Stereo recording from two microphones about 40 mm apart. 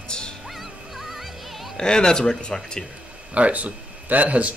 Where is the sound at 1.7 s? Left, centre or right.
Centre.